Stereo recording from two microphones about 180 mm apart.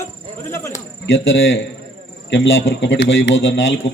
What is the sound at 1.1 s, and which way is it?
A man's voice, 90° left.